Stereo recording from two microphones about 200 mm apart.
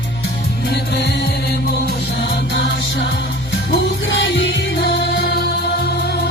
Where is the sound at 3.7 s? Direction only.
65° left (ahead or behind).